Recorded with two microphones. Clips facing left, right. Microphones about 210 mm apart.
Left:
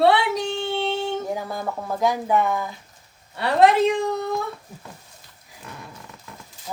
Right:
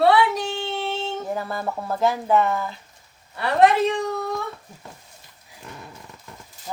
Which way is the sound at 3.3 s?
25° left (ahead or behind).